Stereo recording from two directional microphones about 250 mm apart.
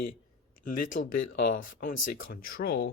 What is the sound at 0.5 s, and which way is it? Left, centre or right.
Speech, left.